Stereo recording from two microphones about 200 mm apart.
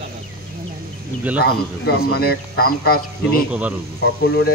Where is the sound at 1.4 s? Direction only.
50° left (ahead or behind).